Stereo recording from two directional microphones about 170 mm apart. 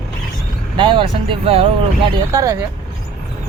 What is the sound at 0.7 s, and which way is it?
Speech, 30° right (ahead or behind).